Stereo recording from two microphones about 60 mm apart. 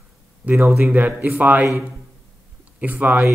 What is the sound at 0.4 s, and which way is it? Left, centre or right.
Speech, right.